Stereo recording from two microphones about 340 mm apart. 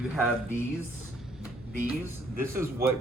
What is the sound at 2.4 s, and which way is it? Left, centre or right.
Speech, centre.